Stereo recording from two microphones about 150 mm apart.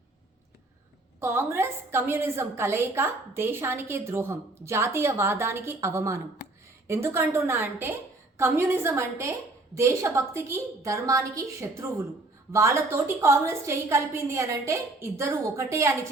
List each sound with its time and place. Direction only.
1.2 s a woman's voice: 15° right (ahead or behind)